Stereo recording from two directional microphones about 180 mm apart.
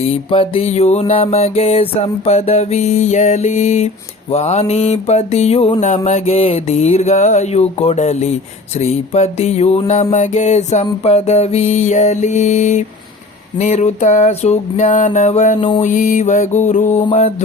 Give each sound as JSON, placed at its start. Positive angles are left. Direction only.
{"t": 0.3, "sound": "music", "side_deg": 30}